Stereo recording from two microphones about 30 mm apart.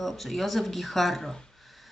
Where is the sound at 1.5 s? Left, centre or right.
Centre.